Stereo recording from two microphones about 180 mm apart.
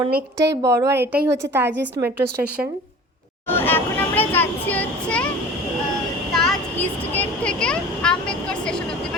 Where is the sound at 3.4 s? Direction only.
10° left (ahead or behind).